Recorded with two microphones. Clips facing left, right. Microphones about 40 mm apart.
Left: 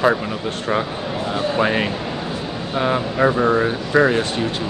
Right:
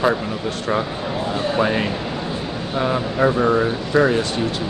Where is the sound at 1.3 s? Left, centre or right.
Centre.